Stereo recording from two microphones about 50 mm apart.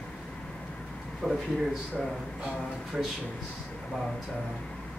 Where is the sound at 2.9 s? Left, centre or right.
Centre.